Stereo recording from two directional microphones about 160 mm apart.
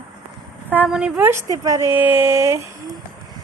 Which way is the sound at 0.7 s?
10° right (ahead or behind).